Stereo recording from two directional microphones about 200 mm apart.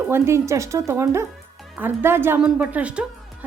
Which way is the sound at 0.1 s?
15° right (ahead or behind).